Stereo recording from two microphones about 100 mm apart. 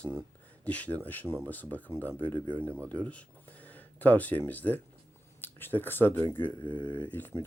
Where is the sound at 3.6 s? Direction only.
15° left (ahead or behind).